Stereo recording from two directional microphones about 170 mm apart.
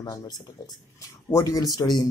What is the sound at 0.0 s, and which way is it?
Speech, 20° left (ahead or behind).